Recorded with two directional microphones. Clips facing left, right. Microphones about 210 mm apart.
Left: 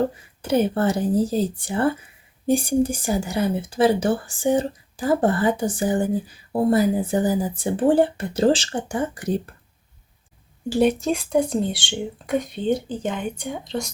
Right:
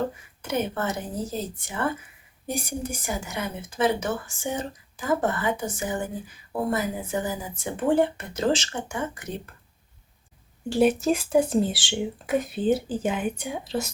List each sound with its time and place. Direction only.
0.4 s speech: 35° left (ahead or behind)
10.7 s speech: centre (ahead or behind)